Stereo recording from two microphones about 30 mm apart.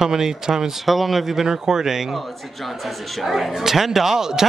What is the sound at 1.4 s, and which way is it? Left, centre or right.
Speech, centre.